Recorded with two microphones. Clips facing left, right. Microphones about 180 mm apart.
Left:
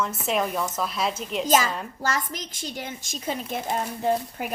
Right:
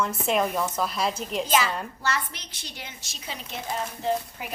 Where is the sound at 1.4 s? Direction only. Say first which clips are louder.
Left 3 dB; 40° left (ahead or behind).